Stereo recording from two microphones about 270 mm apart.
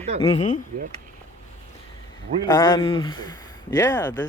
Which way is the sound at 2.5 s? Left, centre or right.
Centre.